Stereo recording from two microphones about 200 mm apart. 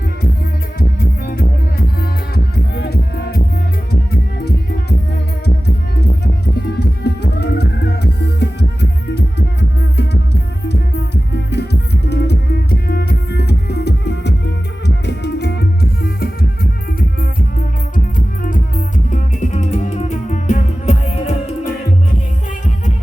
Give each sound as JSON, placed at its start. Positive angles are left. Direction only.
{"t": 0.8, "sound": "music", "side_deg": 50}
{"t": 6.2, "sound": "music", "side_deg": 55}
{"t": 19.1, "sound": "music", "side_deg": 35}